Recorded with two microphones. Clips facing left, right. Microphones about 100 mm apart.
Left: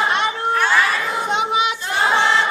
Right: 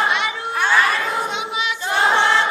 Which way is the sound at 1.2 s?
50° left (ahead or behind).